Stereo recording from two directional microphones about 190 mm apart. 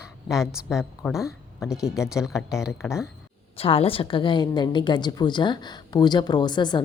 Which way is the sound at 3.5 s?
30° left (ahead or behind).